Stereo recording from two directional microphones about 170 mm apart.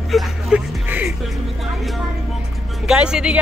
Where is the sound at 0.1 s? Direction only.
10° right (ahead or behind).